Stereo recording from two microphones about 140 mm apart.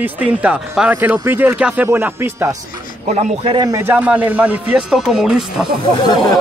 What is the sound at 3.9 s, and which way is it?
Speech, 10° right (ahead or behind).